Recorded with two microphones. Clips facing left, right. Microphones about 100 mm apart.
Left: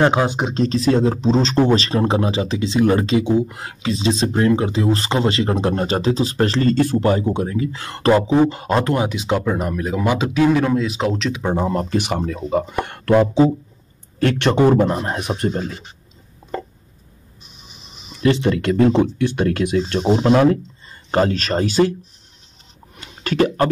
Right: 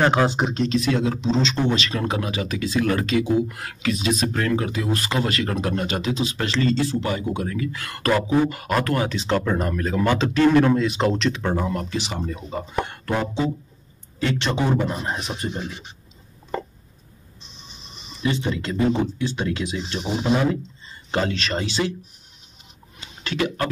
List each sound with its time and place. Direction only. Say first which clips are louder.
0.0 s speech: left 2 dB; 15° left (ahead or behind)
0.6 s speech: left 7 dB; 35° left (ahead or behind); by 11.4 s centre (ahead or behind)
11.4 s speech: left 4 dB; 30° left (ahead or behind)
11.9 s a man's voice: left 7 dB; 55° left (ahead or behind); by 13.5 s 75° left (ahead or behind)
14.2 s a man's voice: left 8 dB; 55° left (ahead or behind)
17.4 s printer: even; 5° left (ahead or behind)
18.2 s speech: left 8 dB; 70° left (ahead or behind)
20.1 s speech: left 7 dB; 90° left
21.1 s a man's voice: left 6 dB; 40° left (ahead or behind)
22.9 s a sound: left 7 dB; 45° left (ahead or behind)